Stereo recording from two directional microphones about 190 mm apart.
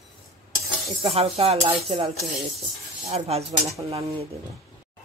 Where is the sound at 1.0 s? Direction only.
30° right (ahead or behind).